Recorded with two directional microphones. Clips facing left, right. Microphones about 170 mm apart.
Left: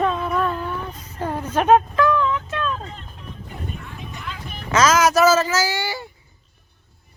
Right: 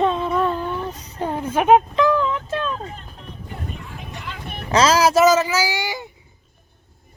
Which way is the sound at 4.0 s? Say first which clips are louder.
Even; 60° right (ahead or behind).